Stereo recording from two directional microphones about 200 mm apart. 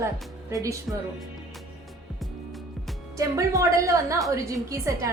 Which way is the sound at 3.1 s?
15° right (ahead or behind).